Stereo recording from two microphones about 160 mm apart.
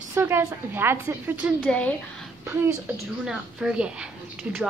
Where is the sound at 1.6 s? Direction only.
10° left (ahead or behind).